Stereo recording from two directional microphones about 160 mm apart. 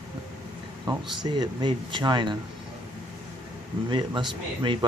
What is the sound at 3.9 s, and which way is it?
Speech, 30° right (ahead or behind).